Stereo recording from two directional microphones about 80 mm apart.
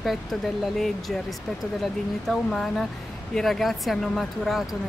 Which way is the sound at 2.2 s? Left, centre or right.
Centre.